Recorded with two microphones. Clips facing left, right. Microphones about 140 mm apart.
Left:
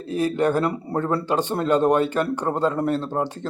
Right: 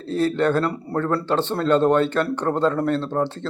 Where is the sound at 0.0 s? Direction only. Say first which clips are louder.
Right 1 dB; 15° left (ahead or behind).